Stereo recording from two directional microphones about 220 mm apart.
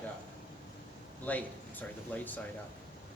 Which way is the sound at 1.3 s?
5° left (ahead or behind).